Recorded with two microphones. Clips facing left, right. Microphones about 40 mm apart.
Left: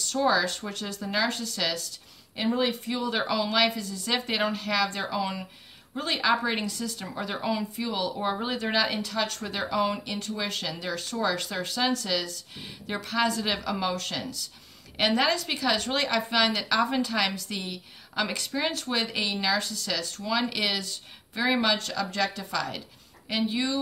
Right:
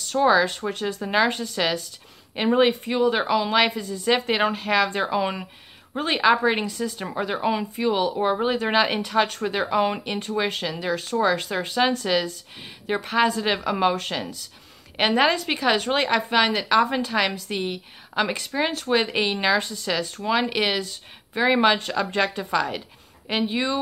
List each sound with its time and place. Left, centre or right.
0.2 s speech: right
1.0 s a woman's voice: right
2.3 s speech: right
2.8 s a woman's voice: right
7.4 s a woman's voice: right
8.3 s speech: centre
8.6 s a woman's voice: right
9.3 s a woman's voice: centre
18.9 s a woman's voice: right